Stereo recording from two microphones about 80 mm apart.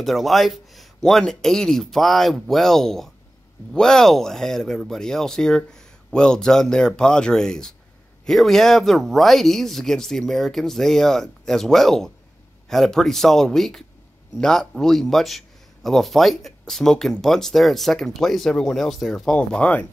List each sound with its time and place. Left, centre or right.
0.0 s speech: centre